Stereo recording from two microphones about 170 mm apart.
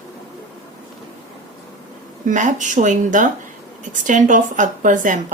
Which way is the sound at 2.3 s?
50° right (ahead or behind).